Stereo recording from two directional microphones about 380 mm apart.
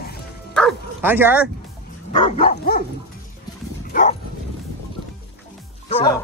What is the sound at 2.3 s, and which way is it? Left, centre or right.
Dog, centre.